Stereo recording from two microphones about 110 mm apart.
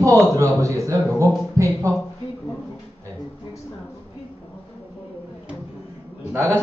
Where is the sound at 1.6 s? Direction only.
25° right (ahead or behind).